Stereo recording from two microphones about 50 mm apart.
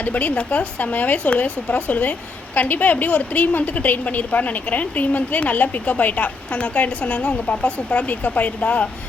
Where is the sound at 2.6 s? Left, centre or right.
Left.